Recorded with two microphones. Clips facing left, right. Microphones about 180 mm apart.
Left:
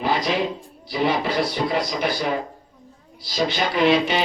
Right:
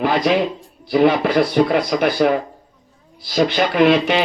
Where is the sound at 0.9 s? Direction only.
55° right (ahead or behind).